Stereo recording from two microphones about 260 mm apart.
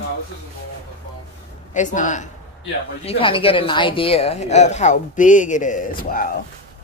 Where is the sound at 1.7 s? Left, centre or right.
Left.